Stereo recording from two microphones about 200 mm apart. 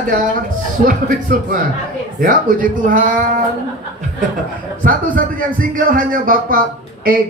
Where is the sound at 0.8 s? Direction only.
45° right (ahead or behind).